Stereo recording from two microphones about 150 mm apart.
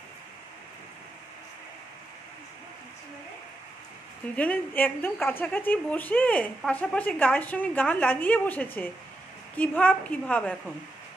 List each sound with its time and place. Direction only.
4.4 s a woman's voice: 10° left (ahead or behind)